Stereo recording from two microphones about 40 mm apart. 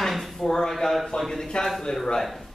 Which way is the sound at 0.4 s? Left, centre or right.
Centre.